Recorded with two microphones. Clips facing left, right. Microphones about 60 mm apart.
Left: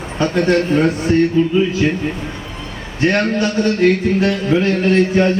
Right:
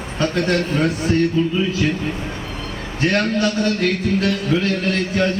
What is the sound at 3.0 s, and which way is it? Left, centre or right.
A man's voice, left.